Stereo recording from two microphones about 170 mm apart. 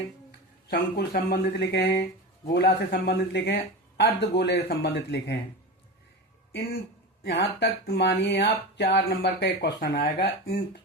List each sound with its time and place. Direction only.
0.3 s speech: 65° left (ahead or behind)
2.5 s speech: 80° left
7.3 s speech: 75° left (ahead or behind)